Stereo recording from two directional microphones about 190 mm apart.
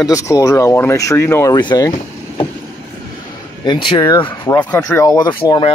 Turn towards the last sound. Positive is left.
turn(degrees=25)  # may be behind; listen again after turning